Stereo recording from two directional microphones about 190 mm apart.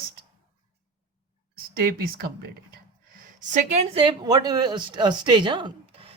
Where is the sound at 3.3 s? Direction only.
40° right (ahead or behind).